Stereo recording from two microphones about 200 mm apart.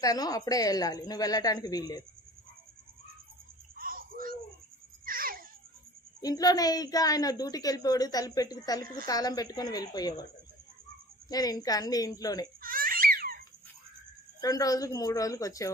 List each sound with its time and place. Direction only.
0.0 s a woman's voice: 20° left (ahead or behind)
3.8 s a sound: 45° right (ahead or behind)
6.2 s a woman's voice: 20° left (ahead or behind)
11.3 s a woman's voice: 20° left (ahead or behind)
12.6 s babbling: 45° right (ahead or behind)
14.4 s a woman's voice: 15° left (ahead or behind)